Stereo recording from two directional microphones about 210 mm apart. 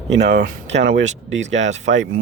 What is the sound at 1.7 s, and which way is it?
Speech, 35° right (ahead or behind).